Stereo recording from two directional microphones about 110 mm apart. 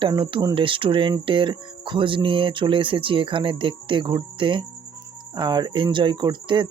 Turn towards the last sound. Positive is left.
turn(degrees=-45)  # may be behind; listen again after turning